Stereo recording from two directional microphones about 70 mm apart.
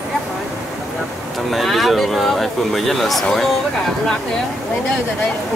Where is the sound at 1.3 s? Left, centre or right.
Centre.